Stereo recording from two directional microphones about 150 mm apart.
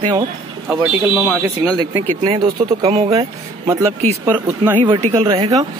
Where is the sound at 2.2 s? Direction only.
35° right (ahead or behind).